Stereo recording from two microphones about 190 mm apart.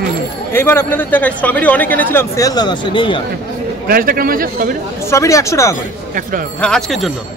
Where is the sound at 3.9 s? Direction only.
50° right (ahead or behind).